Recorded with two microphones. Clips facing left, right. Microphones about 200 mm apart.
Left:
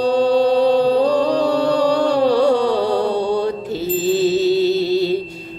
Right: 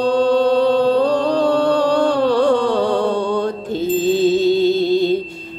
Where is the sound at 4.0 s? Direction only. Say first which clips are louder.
Right 1 dB; 5° left (ahead or behind).